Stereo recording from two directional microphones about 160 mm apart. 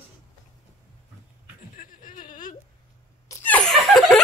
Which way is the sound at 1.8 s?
60° left (ahead or behind).